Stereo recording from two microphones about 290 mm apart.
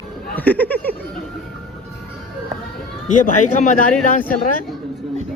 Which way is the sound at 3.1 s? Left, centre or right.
Left.